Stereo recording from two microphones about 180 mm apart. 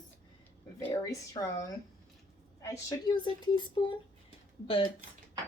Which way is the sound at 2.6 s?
20° left (ahead or behind).